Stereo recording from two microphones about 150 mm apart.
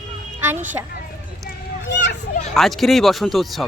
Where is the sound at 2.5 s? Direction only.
Centre (ahead or behind).